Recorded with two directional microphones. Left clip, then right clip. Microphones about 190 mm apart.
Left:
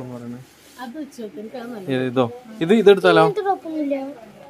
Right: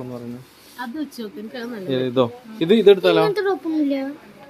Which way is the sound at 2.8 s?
20° left (ahead or behind).